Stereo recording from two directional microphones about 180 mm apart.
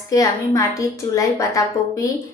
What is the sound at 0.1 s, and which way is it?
Speech, 15° left (ahead or behind).